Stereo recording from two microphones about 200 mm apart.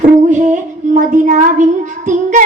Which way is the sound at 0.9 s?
35° right (ahead or behind).